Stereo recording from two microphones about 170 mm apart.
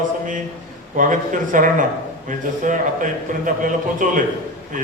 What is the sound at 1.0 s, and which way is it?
A woman's voice, 50° right (ahead or behind).